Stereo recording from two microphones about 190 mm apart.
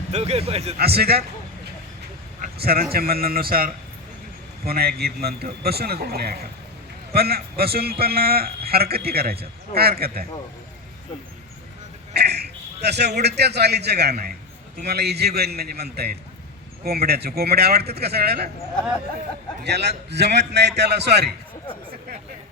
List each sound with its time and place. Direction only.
0.1 s speech: 35° right (ahead or behind)
0.8 s a man's voice: 55° right (ahead or behind)
2.4 s a sound: 55° right (ahead or behind)
2.9 s a man's voice: 50° right (ahead or behind)
12.1 s a sound: 60° right (ahead or behind)
13.2 s a man's voice: 60° right (ahead or behind)
19.6 s a man's voice: 60° right (ahead or behind)